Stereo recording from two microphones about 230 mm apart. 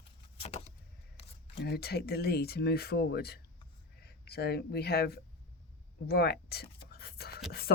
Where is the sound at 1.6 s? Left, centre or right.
Left.